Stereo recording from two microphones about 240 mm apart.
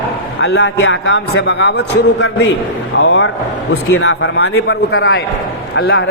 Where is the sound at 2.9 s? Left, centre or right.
Left.